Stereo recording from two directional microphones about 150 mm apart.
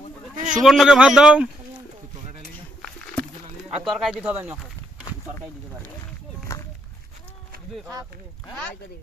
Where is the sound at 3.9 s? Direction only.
5° right (ahead or behind).